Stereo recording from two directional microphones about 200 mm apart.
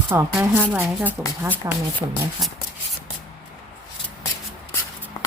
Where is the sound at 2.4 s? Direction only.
Centre (ahead or behind).